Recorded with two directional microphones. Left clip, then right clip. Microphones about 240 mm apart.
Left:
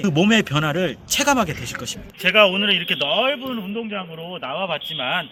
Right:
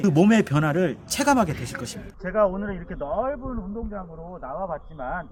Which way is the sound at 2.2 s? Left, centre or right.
Left.